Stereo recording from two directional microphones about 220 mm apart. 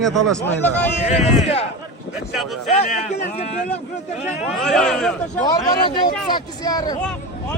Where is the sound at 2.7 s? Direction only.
30° left (ahead or behind).